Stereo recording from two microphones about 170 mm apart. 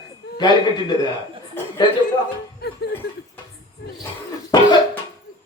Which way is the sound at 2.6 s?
75° left (ahead or behind).